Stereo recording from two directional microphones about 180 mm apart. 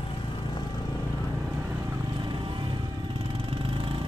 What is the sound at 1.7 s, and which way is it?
Vehicle, 20° right (ahead or behind).